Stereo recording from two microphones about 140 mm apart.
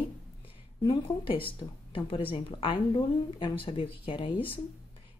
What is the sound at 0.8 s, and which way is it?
Speech, 40° left (ahead or behind).